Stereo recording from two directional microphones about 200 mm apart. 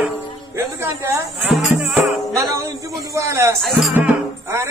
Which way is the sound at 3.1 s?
15° right (ahead or behind).